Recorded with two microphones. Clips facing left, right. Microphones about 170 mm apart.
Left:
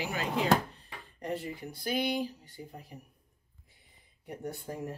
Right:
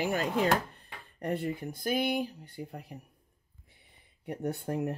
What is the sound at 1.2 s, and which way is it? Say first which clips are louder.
Speech: right 4 dB; 55° right (ahead or behind).